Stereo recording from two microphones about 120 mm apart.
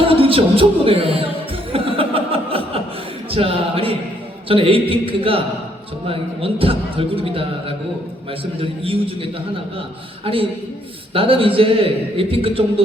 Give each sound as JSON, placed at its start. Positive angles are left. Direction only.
{"t": 0.0, "sound": "a man's voice", "side_deg": -50}
{"t": 1.7, "sound": "chuckle", "side_deg": -50}
{"t": 3.3, "sound": "a sound", "side_deg": -50}
{"t": 4.4, "sound": "a man's voice", "side_deg": -50}
{"t": 8.8, "sound": "a man's voice", "side_deg": -50}